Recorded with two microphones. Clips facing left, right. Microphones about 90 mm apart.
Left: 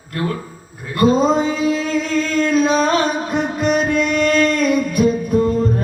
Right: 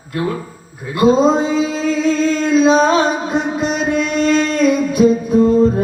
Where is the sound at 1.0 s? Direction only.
50° left (ahead or behind).